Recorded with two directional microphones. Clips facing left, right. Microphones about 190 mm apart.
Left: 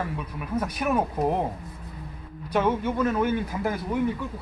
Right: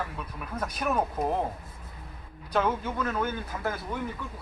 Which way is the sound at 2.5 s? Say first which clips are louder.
Left 4 dB; 10° left (ahead or behind).